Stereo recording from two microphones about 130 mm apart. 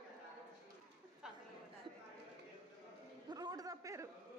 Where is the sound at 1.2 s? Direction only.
5° right (ahead or behind).